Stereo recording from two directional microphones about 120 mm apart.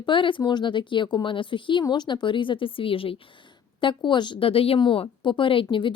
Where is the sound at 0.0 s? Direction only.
45° left (ahead or behind).